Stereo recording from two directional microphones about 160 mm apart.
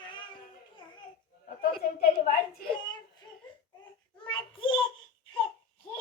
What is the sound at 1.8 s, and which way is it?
Speech, 70° left (ahead or behind).